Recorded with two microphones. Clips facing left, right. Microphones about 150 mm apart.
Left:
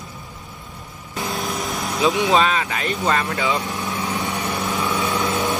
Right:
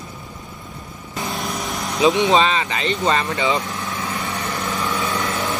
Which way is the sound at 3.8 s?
15° left (ahead or behind).